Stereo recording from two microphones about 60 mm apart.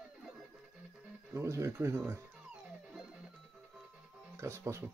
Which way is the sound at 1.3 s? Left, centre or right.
Right.